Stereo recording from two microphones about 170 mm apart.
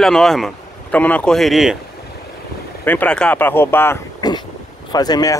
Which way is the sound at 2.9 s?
10° left (ahead or behind).